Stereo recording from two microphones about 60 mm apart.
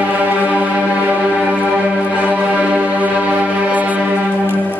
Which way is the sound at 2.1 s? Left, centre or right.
Right.